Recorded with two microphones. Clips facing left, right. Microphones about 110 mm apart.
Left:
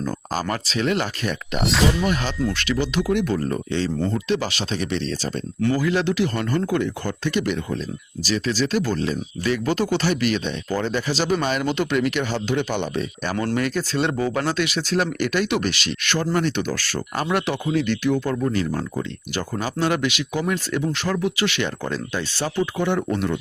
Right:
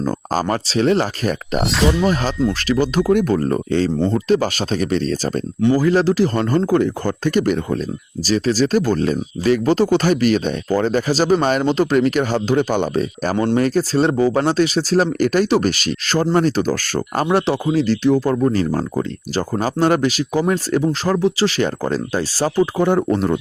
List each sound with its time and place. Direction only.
0.4 s speech: 35° right (ahead or behind)
1.6 s speech: centre (ahead or behind)
2.5 s speech: 40° right (ahead or behind)
13.3 s speech: 25° right (ahead or behind)
13.6 s speech: 35° right (ahead or behind)
17.2 s speech: 30° right (ahead or behind)